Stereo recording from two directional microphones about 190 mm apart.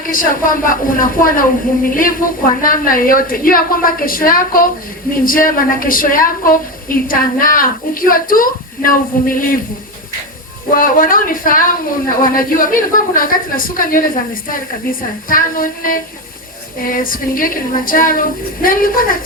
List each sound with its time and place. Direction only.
0.0 s a woman's voice: 45° left (ahead or behind)
2.6 s a woman's voice: 50° left (ahead or behind)
10.7 s a woman's voice: 45° left (ahead or behind)